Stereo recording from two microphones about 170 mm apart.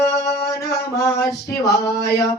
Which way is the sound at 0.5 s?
20° left (ahead or behind).